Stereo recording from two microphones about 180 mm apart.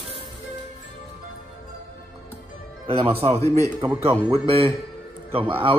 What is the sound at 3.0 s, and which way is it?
Speech, 30° right (ahead or behind).